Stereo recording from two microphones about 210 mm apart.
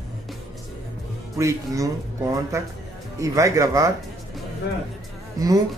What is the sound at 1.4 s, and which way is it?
Speech, 15° right (ahead or behind).